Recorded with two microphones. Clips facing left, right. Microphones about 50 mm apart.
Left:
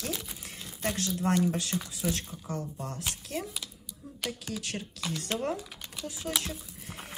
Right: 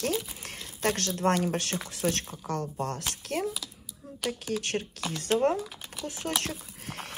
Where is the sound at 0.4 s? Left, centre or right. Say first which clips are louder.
Right 5 dB; right.